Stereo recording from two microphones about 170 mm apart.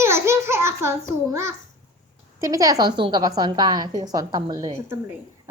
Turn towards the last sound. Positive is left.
turn(degrees=-20)  # may be behind; listen again after turning